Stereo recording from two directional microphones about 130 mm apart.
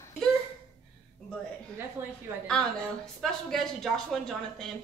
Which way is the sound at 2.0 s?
15° right (ahead or behind).